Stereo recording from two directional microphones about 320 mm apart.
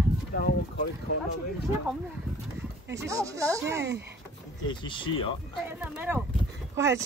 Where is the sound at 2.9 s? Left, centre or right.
Centre.